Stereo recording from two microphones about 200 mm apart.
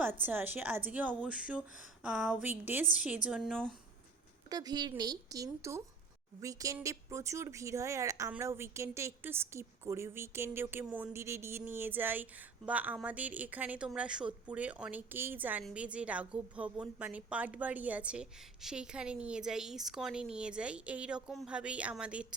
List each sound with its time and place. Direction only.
0.3 s speech: 10° right (ahead or behind)
4.4 s a woman's voice: 20° right (ahead or behind)